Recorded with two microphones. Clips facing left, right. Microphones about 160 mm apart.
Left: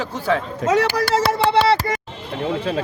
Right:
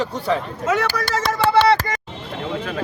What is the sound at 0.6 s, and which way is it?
Speech, 30° left (ahead or behind).